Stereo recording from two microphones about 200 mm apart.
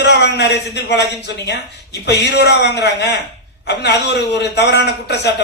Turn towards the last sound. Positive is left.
turn(degrees=55)  # may be behind; listen again after turning